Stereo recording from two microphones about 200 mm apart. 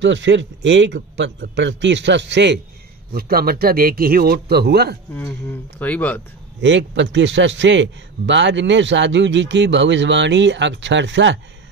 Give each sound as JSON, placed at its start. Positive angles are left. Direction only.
{"t": 0.0, "sound": "a man's voice", "side_deg": -65}
{"t": 3.1, "sound": "a man's voice", "side_deg": -50}
{"t": 5.1, "sound": "speech", "side_deg": 10}
{"t": 6.6, "sound": "a man's voice", "side_deg": -65}